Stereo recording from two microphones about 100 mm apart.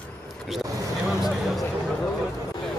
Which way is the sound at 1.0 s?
5° right (ahead or behind).